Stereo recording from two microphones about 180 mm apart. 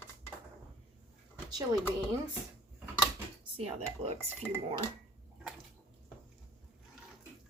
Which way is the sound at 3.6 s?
35° right (ahead or behind).